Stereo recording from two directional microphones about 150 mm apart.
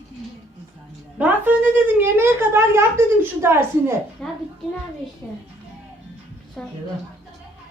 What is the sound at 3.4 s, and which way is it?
Speech, 15° right (ahead or behind).